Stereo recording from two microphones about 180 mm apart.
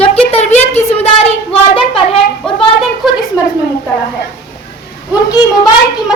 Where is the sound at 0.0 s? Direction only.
35° left (ahead or behind).